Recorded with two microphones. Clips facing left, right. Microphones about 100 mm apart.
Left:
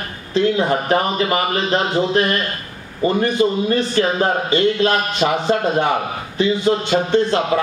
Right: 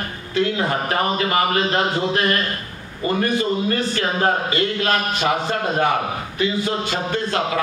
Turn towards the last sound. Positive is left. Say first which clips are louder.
# left 5 dB
turn(degrees=25)  # may be behind; listen again after turning